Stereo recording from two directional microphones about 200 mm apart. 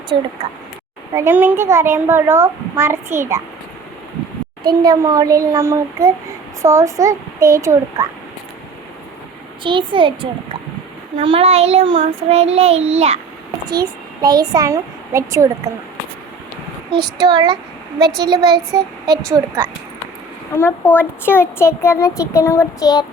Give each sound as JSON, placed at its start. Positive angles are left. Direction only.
{"t": 0.1, "sound": "a child's voice", "side_deg": -25}
{"t": 1.1, "sound": "a child's voice", "side_deg": -10}
{"t": 4.7, "sound": "a child's voice", "side_deg": -20}
{"t": 9.6, "sound": "a child's voice", "side_deg": -25}
{"t": 11.2, "sound": "child singing", "side_deg": -30}
{"t": 13.7, "sound": "a child's voice", "side_deg": -20}
{"t": 17.2, "sound": "a child's voice", "side_deg": -20}
{"t": 20.6, "sound": "a child's voice", "side_deg": 10}